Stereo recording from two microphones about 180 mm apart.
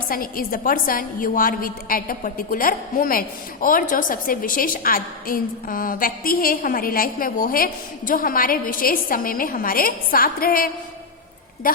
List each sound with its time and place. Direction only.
0.1 s a woman's voice: 55° left (ahead or behind)